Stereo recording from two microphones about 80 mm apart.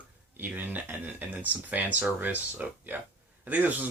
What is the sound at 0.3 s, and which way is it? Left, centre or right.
Speech, right.